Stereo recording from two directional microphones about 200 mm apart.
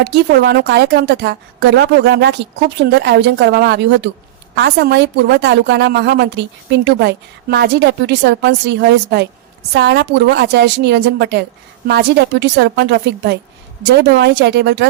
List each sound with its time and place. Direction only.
0.0 s a woman's voice: 60° right (ahead or behind)